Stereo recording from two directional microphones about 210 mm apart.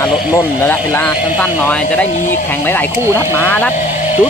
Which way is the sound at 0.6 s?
10° left (ahead or behind).